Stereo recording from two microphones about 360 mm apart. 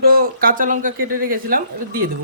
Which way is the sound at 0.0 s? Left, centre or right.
Right.